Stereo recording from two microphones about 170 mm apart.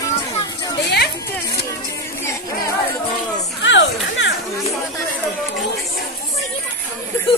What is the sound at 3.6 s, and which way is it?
Speech, 90° left.